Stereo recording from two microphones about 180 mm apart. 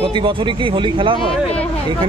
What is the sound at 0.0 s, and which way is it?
Speech, 30° right (ahead or behind).